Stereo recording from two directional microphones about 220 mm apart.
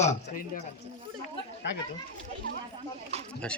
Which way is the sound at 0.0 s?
40° left (ahead or behind).